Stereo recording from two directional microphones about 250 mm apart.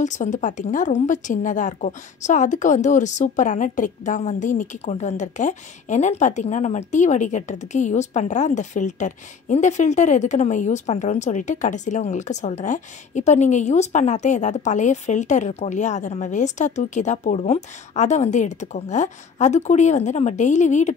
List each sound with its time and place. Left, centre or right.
0.0 s a woman's voice: left